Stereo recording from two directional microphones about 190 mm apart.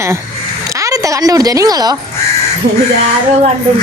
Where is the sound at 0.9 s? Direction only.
15° right (ahead or behind).